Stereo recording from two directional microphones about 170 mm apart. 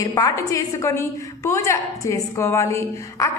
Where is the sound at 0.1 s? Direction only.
20° left (ahead or behind).